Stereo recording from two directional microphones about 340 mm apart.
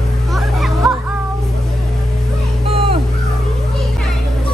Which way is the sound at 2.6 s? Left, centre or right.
Centre.